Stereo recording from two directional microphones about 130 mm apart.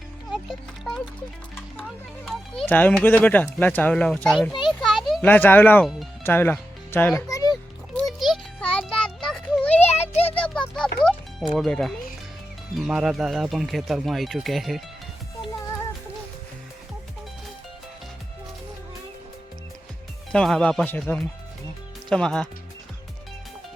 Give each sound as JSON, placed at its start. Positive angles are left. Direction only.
{"t": 0.3, "sound": "music", "side_deg": 0}
{"t": 1.8, "sound": "children playing", "side_deg": 5}
{"t": 2.6, "sound": "a child's voice", "side_deg": 15}
{"t": 4.8, "sound": "a sound", "side_deg": 0}
{"t": 5.2, "sound": "a child's voice", "side_deg": 15}
{"t": 5.8, "sound": "speech", "side_deg": 0}
{"t": 6.2, "sound": "speech", "side_deg": 15}
{"t": 7.2, "sound": "a sound", "side_deg": 25}
{"t": 7.5, "sound": "music", "side_deg": 0}
{"t": 9.7, "sound": "a sound", "side_deg": 55}
{"t": 10.3, "sound": "music", "side_deg": 10}
{"t": 11.5, "sound": "speech", "side_deg": 5}
{"t": 20.3, "sound": "a child's voice", "side_deg": 5}